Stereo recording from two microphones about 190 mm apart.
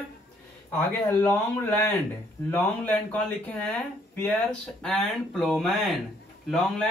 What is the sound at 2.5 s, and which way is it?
Speech, 10° left (ahead or behind).